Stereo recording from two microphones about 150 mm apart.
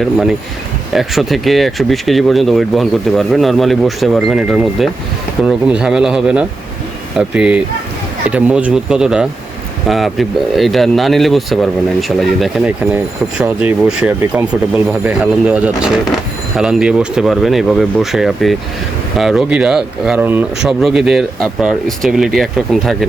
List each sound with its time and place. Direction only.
0.0 s speech: centre (ahead or behind)